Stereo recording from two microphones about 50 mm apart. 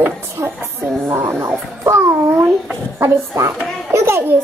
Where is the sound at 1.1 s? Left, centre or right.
Right.